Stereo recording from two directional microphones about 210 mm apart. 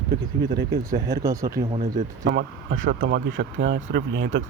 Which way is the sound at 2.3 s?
60° right (ahead or behind).